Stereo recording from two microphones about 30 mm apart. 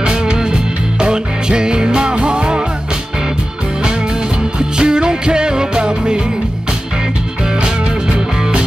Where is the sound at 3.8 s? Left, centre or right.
Right.